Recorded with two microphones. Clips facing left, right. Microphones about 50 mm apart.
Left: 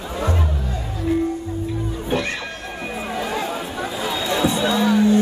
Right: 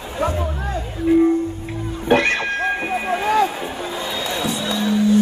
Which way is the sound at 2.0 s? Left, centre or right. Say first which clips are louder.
Right 9 dB; right.